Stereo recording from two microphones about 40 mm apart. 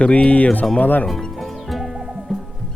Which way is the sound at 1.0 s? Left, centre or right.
Centre.